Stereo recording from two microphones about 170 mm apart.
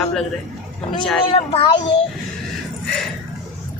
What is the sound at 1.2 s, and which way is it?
Speech, 35° left (ahead or behind).